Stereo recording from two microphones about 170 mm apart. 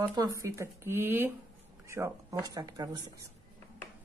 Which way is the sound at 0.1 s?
20° right (ahead or behind).